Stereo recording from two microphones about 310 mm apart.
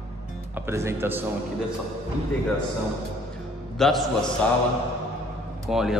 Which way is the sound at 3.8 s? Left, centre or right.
Centre.